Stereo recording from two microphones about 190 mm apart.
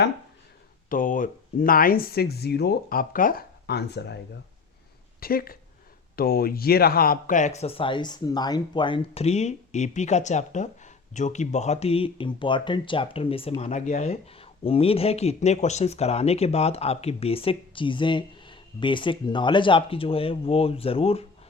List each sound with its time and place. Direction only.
0.9 s speech: 45° left (ahead or behind); by 4.2 s 60° left (ahead or behind)
5.2 s speech: 50° left (ahead or behind); by 21.2 s 30° left (ahead or behind)